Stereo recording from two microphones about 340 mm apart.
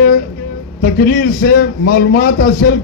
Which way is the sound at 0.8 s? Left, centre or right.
Left.